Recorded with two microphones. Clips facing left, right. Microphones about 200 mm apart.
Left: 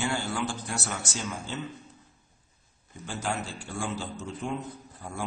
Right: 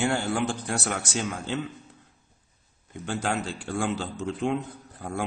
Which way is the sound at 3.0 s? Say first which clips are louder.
Right 4 dB; 60° right (ahead or behind).